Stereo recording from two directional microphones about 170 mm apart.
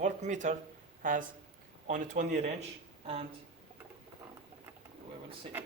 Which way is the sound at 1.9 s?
45° right (ahead or behind).